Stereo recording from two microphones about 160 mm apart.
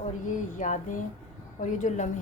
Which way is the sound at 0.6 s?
50° left (ahead or behind).